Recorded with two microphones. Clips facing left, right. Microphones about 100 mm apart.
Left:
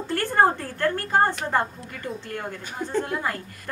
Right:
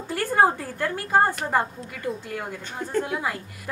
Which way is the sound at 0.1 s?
5° right (ahead or behind).